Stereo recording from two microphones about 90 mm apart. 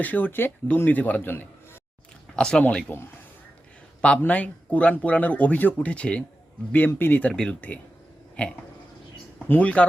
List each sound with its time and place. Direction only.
0.0 s a man's voice: 20° left (ahead or behind)
2.3 s speech: 10° left (ahead or behind)
4.2 s speech: 15° left (ahead or behind)